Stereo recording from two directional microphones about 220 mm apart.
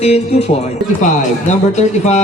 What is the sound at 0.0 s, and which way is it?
Speech, 30° left (ahead or behind).